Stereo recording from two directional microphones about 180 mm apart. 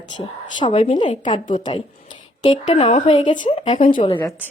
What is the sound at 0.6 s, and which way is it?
A woman's voice, 35° left (ahead or behind).